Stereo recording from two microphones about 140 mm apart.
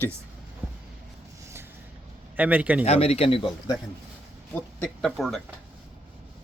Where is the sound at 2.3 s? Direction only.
10° right (ahead or behind).